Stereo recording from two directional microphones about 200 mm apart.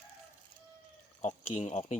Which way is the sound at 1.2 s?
35° left (ahead or behind).